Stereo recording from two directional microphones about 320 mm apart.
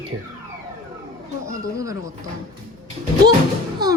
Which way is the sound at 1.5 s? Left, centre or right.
Centre.